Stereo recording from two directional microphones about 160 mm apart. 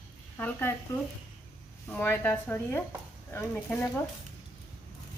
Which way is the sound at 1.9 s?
15° left (ahead or behind).